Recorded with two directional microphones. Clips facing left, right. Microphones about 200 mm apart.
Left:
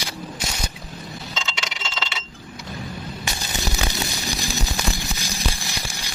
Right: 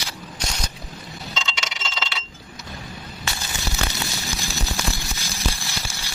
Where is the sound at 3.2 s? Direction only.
15° left (ahead or behind).